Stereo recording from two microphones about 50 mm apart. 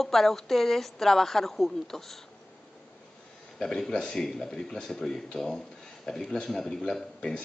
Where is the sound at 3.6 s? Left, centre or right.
Centre.